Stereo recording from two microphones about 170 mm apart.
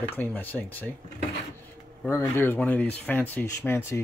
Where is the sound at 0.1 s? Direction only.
10° left (ahead or behind).